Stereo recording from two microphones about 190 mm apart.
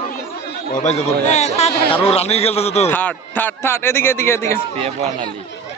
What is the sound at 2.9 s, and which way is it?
A man's voice, 10° left (ahead or behind).